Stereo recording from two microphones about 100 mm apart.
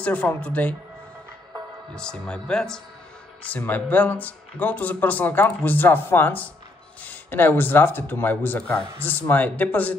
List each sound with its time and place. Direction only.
0.0 s speech: 15° left (ahead or behind)
2.0 s speech: 10° left (ahead or behind)